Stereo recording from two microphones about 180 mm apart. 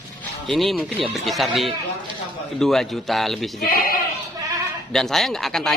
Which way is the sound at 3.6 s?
55° left (ahead or behind).